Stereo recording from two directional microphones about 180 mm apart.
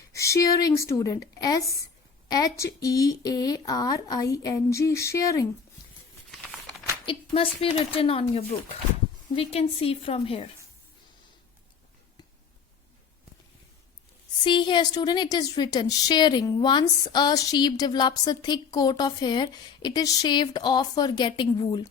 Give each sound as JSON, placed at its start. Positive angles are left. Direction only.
{"t": 0.1, "sound": "a woman's voice", "side_deg": 15}
{"t": 6.4, "sound": "crumpling", "side_deg": 0}
{"t": 7.0, "sound": "speech", "side_deg": 30}
{"t": 14.4, "sound": "a woman's voice", "side_deg": 25}